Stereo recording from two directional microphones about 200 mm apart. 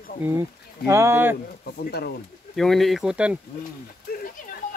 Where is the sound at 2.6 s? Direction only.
Centre (ahead or behind).